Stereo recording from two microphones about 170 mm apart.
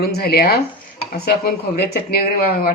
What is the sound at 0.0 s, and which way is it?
Speech, 70° left (ahead or behind).